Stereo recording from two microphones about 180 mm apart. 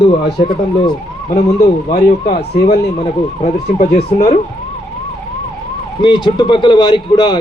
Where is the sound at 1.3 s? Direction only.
40° left (ahead or behind).